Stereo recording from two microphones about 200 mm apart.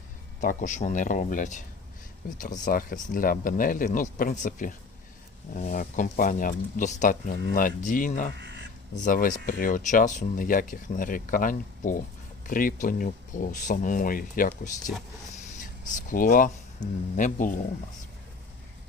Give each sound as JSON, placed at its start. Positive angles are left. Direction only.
{"t": 0.4, "sound": "speech", "side_deg": 40}
{"t": 8.4, "sound": "a sound", "side_deg": -60}
{"t": 9.0, "sound": "speech", "side_deg": 40}
{"t": 16.0, "sound": "speech", "side_deg": 40}